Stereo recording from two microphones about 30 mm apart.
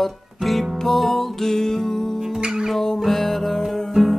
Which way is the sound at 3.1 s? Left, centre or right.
Centre.